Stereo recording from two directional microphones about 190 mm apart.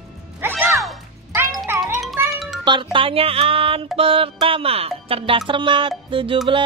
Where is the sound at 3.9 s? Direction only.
30° right (ahead or behind).